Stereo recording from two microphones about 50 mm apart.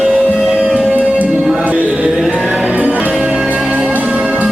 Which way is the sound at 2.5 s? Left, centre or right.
Right.